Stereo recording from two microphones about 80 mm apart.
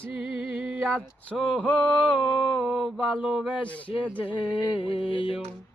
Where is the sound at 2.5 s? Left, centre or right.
Centre.